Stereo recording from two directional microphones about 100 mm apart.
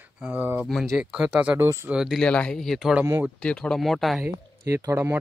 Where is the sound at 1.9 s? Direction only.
5° right (ahead or behind).